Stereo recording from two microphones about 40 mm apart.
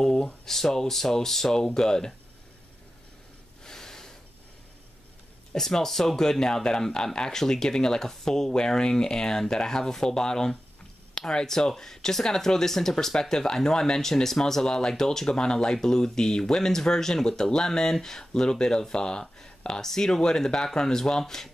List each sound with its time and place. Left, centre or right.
0.0 s a sound: centre
0.5 s speech: centre
3.6 s gasp: centre
5.5 s speech: centre